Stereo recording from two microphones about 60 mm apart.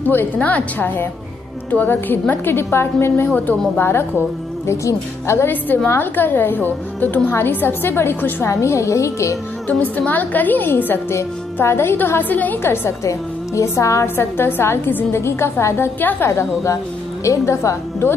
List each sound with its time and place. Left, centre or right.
0.0 s a woman's voice: left
0.4 s a woman's voice: left
3.3 s a woman's voice: left
4.6 s a woman's voice: left
5.9 s a woman's voice: left
8.5 s a woman's voice: left
9.7 s a woman's voice: left
12.6 s a woman's voice: left
13.6 s a woman's voice: left
14.0 s a woman's voice: left
16.0 s a woman's voice: left
16.3 s a woman's voice: left